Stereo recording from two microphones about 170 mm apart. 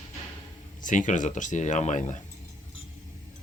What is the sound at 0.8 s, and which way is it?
Speech, 50° left (ahead or behind).